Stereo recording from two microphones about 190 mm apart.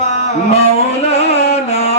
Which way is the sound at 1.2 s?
35° left (ahead or behind).